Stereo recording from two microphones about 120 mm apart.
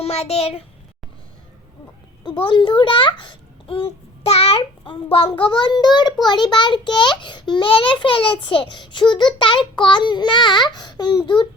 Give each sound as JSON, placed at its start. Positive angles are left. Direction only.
{"t": 0.0, "sound": "a child's voice", "side_deg": 60}
{"t": 2.4, "sound": "a child's voice", "side_deg": 40}